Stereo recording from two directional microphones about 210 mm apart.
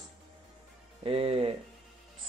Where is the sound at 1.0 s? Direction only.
30° right (ahead or behind).